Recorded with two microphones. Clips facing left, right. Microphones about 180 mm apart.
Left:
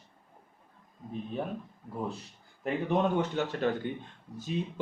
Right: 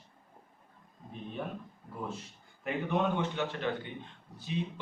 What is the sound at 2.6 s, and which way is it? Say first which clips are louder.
A man's voice: left 3 dB; 40° left (ahead or behind).